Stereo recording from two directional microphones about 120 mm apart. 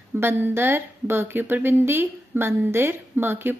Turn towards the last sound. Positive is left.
turn(degrees=-15)  # may be behind; listen again after turning